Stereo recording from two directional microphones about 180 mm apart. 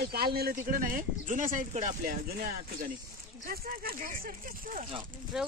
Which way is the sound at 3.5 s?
55° right (ahead or behind).